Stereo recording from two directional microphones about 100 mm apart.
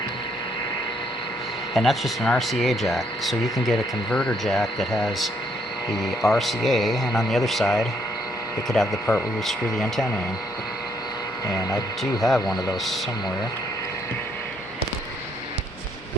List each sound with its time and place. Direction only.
1.7 s speech: centre (ahead or behind)
11.4 s speech: 35° left (ahead or behind)
12.2 s speech: centre (ahead or behind)